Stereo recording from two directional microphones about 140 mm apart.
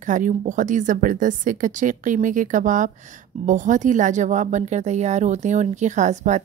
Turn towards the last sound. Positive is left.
turn(degrees=-60)  # may be behind; listen again after turning